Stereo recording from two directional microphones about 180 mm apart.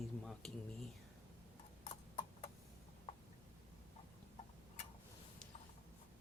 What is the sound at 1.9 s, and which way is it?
Clip-clop, 30° left (ahead or behind).